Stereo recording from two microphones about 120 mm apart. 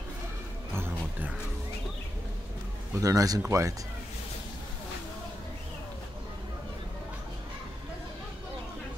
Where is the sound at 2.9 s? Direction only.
30° right (ahead or behind).